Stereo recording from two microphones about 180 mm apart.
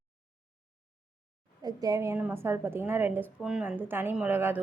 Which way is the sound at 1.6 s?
20° right (ahead or behind).